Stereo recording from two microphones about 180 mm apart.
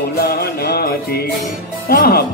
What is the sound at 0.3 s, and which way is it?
Music, 60° left (ahead or behind).